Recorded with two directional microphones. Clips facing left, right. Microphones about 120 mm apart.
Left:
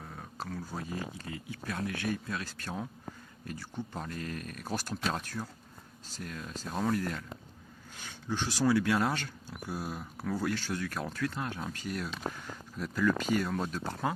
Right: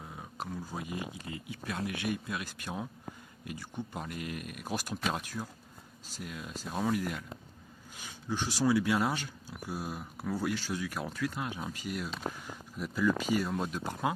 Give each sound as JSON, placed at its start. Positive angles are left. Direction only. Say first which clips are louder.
{"t": 0.0, "sound": "speech", "louder": "even", "side_deg": -10}